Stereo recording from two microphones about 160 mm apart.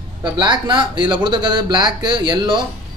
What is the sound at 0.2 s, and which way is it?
Speech, 30° right (ahead or behind).